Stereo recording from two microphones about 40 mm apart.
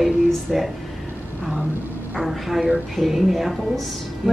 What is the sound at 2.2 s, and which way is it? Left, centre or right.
Speech, centre.